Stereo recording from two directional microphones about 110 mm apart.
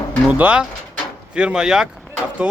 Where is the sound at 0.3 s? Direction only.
15° right (ahead or behind).